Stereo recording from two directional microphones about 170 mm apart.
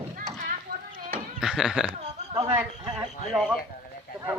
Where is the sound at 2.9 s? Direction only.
5° right (ahead or behind).